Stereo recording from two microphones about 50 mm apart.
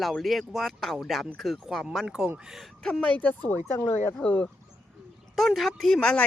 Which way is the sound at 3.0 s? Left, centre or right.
Left.